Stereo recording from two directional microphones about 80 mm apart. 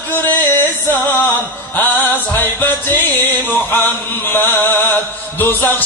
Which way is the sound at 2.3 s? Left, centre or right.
Left.